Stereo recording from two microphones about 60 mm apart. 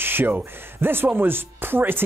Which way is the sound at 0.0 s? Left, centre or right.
Right.